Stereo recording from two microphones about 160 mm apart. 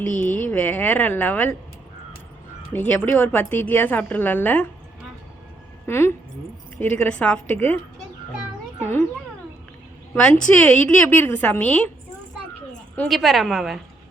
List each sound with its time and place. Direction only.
0.1 s a woman's voice: 10° left (ahead or behind)
2.7 s a woman's voice: 10° left (ahead or behind)
5.8 s a woman's voice: 15° left (ahead or behind)
8.8 s a sound: 15° left (ahead or behind)
10.2 s a woman's voice: 5° left (ahead or behind)
13.0 s a woman's voice: centre (ahead or behind)